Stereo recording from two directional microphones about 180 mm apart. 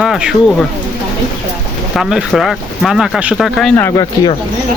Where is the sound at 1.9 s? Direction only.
5° right (ahead or behind).